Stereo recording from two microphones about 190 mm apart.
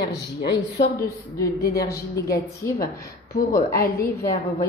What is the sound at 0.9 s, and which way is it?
A woman's voice, 15° left (ahead or behind).